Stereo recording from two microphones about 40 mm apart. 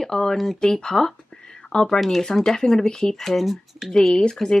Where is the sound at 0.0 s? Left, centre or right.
Centre.